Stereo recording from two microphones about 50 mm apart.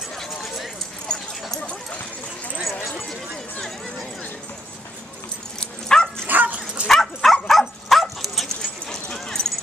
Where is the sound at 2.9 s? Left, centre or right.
Centre.